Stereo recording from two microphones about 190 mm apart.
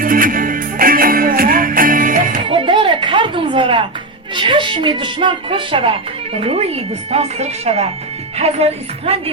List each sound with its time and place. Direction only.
0.0 s music: 45° right (ahead or behind)
2.5 s a sound: 25° right (ahead or behind)
4.4 s a woman's voice: 25° right (ahead or behind)